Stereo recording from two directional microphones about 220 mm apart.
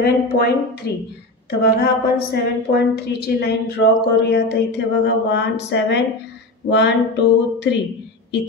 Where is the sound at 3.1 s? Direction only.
45° left (ahead or behind).